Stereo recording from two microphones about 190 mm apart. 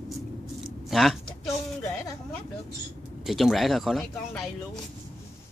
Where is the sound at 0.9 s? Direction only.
Centre (ahead or behind).